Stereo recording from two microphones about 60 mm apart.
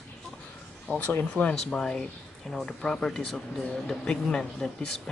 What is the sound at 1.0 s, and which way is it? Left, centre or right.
Speech, left.